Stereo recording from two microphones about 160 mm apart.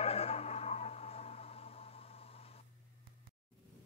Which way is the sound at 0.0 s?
40° left (ahead or behind).